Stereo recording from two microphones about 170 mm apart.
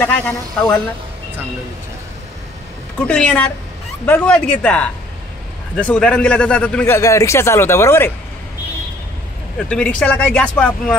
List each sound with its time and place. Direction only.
0.0 s speech: 5° left (ahead or behind)
3.0 s a woman's voice: 5° left (ahead or behind)
7.0 s speech: 20° left (ahead or behind)
9.6 s speech: 5° left (ahead or behind)